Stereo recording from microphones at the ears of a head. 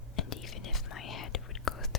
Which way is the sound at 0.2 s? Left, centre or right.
Left.